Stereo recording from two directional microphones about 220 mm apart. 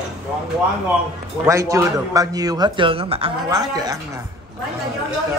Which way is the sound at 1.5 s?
15° right (ahead or behind).